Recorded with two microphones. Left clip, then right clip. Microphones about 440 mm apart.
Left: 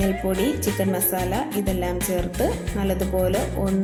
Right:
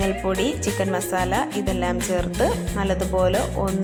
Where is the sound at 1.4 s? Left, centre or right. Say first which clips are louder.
Right 2 dB; left.